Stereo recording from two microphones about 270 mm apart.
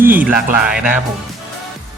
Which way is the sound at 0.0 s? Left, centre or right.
Centre.